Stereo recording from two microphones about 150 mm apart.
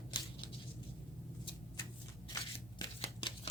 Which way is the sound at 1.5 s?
30° left (ahead or behind).